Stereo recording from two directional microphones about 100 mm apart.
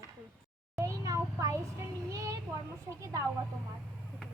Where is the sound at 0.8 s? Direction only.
30° right (ahead or behind).